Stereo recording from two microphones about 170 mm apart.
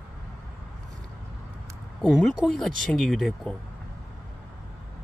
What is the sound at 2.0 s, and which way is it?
Speech, centre (ahead or behind).